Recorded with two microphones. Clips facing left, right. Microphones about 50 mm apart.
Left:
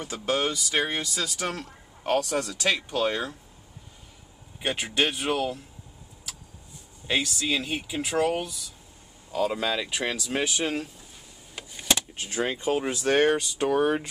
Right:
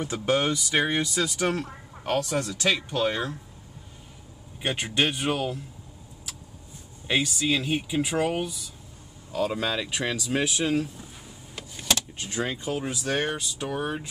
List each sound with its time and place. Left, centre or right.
0.0 s speech: centre
2.5 s speech: centre
4.6 s speech: centre
7.1 s speech: centre
9.3 s speech: centre
10.6 s speech: centre
11.5 s vehicle: centre
12.4 s speech: left